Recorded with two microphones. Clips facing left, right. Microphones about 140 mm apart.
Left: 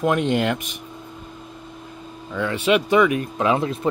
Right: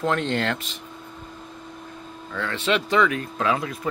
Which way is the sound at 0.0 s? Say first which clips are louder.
Left 4 dB; 15° left (ahead or behind).